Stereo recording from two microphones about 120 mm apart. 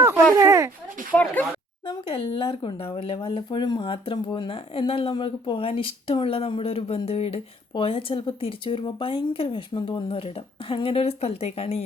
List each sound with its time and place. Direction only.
0.3 s a sound: 25° right (ahead or behind)
1.1 s speech: 15° left (ahead or behind)
1.9 s speech: 45° left (ahead or behind)